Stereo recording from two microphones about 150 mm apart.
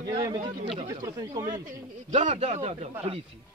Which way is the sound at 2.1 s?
50° right (ahead or behind).